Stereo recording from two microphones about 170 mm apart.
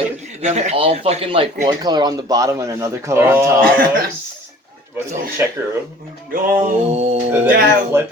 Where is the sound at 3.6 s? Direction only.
55° right (ahead or behind).